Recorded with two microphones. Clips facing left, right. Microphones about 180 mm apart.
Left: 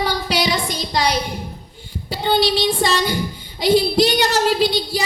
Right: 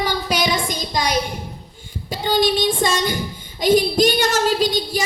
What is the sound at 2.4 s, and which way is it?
Speech, 50° right (ahead or behind).